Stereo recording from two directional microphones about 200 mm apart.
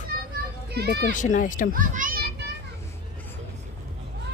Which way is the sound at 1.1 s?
40° left (ahead or behind).